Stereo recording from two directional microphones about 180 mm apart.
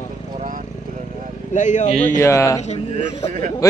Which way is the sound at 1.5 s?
40° left (ahead or behind).